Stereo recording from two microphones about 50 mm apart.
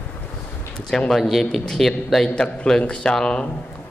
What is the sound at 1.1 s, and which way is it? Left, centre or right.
Speech, centre.